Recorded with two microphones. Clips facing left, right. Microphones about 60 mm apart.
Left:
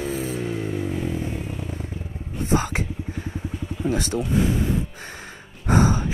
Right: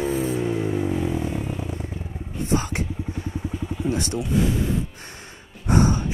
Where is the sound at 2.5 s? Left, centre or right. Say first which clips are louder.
Left 1 dB; left.